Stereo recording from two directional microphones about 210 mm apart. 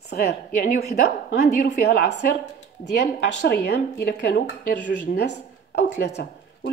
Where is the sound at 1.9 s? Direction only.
55° left (ahead or behind).